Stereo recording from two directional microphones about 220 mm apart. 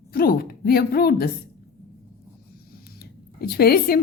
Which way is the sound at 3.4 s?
45° left (ahead or behind).